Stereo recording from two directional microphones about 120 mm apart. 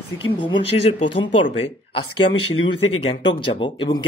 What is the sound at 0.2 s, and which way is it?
Speech, 40° left (ahead or behind).